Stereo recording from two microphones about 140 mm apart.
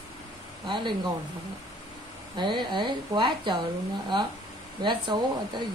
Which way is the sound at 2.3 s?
35° right (ahead or behind).